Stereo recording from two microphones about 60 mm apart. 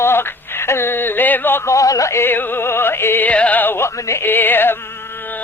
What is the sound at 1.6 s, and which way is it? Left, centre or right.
Speech, left.